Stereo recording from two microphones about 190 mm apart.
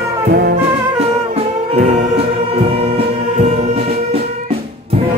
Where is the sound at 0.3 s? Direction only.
60° right (ahead or behind).